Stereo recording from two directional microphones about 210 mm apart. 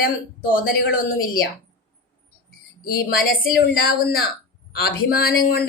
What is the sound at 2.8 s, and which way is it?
Speech, 45° left (ahead or behind).